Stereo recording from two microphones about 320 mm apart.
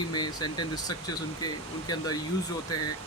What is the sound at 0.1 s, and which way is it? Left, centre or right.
Speech, centre.